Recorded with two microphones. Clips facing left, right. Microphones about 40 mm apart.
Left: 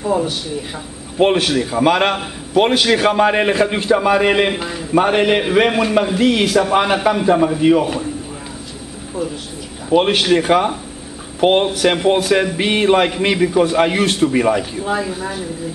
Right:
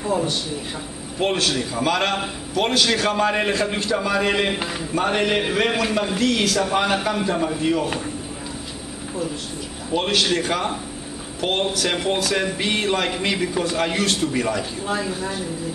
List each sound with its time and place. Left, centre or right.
0.0 s speech: centre
1.2 s a man's voice: left
5.7 s speech: centre
6.1 s a man's voice: centre
9.8 s a man's voice: left
14.6 s speech: centre